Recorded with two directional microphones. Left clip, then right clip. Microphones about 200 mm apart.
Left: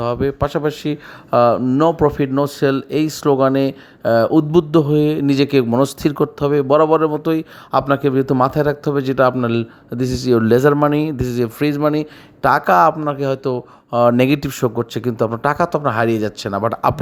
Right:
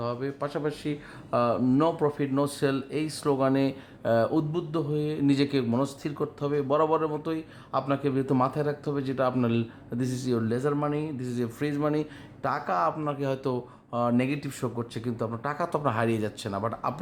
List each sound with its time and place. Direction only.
0.0 s speech: 35° left (ahead or behind)
13.1 s speech: 25° left (ahead or behind)
13.9 s speech: 35° left (ahead or behind)
16.5 s speech: 40° left (ahead or behind)